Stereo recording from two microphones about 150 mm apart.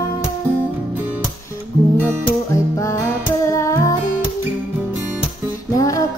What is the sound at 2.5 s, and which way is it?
Music, 20° left (ahead or behind).